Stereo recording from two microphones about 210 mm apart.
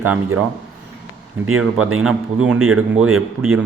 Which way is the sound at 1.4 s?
90° right.